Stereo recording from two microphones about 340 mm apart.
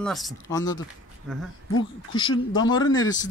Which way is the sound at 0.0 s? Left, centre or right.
Centre.